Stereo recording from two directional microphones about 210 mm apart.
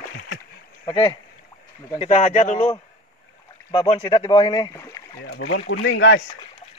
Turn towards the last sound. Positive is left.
turn(degrees=60)  # may be behind; listen again after turning